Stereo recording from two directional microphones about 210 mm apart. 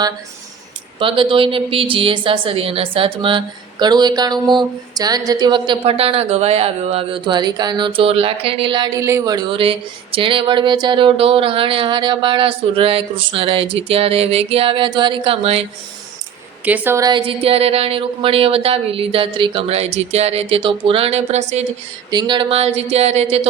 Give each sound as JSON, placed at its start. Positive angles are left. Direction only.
{"t": 0.9, "sound": "a woman's voice", "side_deg": -25}
{"t": 16.6, "sound": "a woman's voice", "side_deg": -10}